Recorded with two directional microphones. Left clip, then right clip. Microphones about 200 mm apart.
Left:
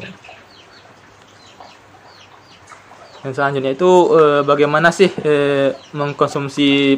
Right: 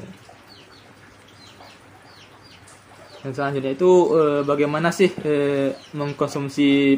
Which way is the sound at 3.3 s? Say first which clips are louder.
Left 7 dB; 10° left (ahead or behind).